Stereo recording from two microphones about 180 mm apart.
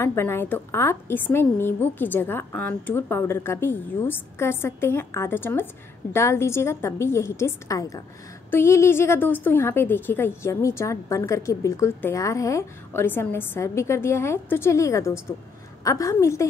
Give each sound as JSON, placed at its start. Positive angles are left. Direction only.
{"t": 0.0, "sound": "a woman's voice", "side_deg": 15}